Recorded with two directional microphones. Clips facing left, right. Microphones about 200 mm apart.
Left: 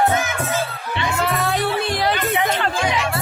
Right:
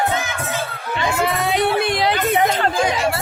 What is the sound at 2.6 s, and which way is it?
Music, 40° right (ahead or behind).